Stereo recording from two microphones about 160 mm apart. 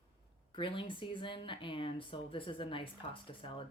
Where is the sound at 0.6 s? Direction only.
30° left (ahead or behind).